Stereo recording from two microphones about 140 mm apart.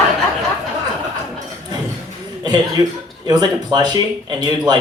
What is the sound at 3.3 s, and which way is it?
Speech, 30° right (ahead or behind).